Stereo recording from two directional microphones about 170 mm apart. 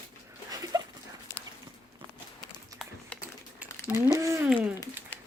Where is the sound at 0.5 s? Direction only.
20° right (ahead or behind).